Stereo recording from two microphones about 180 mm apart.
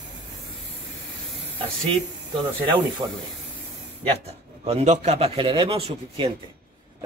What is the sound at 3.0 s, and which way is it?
Speech, 25° right (ahead or behind).